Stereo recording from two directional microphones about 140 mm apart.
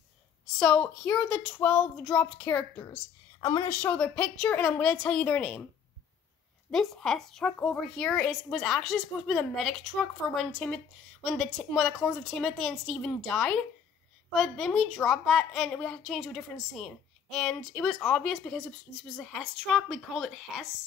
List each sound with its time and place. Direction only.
0.6 s speech: 5° left (ahead or behind)
2.8 s a woman's voice: 25° left (ahead or behind)
3.8 s speech: 10° left (ahead or behind)
6.7 s a woman's voice: centre (ahead or behind)